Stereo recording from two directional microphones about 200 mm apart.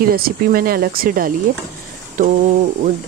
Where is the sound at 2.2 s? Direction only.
40° right (ahead or behind).